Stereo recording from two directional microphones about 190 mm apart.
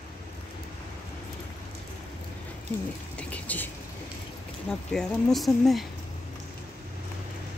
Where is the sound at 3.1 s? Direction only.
10° left (ahead or behind).